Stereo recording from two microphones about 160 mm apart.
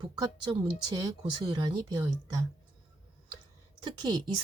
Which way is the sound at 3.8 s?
25° right (ahead or behind).